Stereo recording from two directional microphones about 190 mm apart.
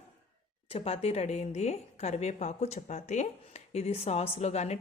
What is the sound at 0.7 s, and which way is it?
A woman's voice, 30° left (ahead or behind).